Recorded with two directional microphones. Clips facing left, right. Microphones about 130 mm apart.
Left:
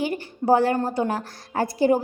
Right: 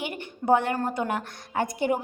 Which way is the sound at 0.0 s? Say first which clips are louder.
Left 6 dB; 35° left (ahead or behind).